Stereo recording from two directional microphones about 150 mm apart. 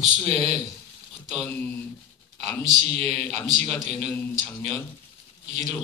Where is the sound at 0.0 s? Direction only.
45° right (ahead or behind).